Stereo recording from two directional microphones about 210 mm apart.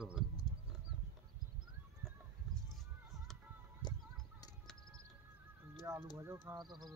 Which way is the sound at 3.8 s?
20° left (ahead or behind).